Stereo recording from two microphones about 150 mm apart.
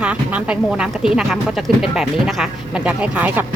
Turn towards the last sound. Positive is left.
turn(degrees=-10)  # may be behind; listen again after turning